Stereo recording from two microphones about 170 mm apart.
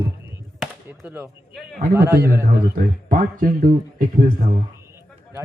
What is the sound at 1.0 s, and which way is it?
A man's voice, 10° right (ahead or behind).